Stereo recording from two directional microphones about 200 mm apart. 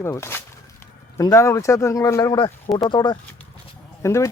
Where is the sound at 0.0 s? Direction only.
15° left (ahead or behind).